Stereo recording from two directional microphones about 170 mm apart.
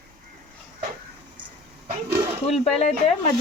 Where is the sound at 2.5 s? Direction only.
40° left (ahead or behind).